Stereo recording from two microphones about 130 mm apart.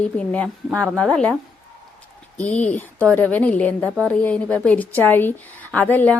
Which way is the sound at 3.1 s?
10° left (ahead or behind).